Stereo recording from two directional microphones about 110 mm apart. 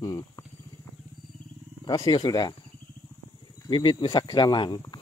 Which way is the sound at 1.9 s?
40° left (ahead or behind).